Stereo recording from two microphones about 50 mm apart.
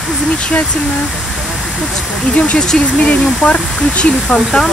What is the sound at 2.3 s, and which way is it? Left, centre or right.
Speech, left.